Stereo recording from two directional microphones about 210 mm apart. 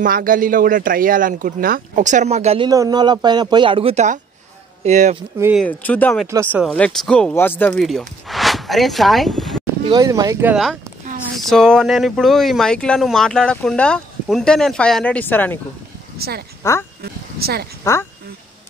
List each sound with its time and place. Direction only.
0.0 s speech: 40° right (ahead or behind)
2.7 s speech: 15° right (ahead or behind); by 5.2 s 35° right (ahead or behind)
5.6 s speech: 5° left (ahead or behind)
6.3 s speech: 10° right (ahead or behind)
6.7 s speech: 5° left (ahead or behind)
9.8 s speech: 20° right (ahead or behind); by 15.6 s 10° left (ahead or behind)
16.2 s speech: 50° right (ahead or behind)
17.9 s speech: 15° left (ahead or behind)